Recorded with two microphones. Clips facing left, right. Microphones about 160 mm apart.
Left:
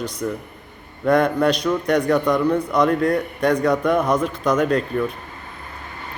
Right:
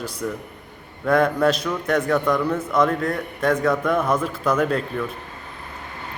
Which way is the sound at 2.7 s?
Centre (ahead or behind).